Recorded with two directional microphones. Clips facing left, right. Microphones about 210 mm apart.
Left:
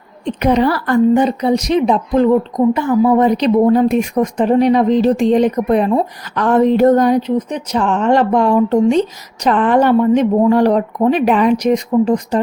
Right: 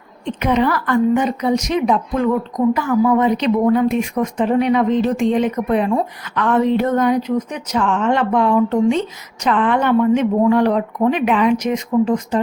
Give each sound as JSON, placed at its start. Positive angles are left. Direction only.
{"t": 0.3, "sound": "a woman's voice", "side_deg": 40}